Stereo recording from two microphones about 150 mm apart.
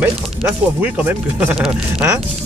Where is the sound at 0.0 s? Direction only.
15° right (ahead or behind).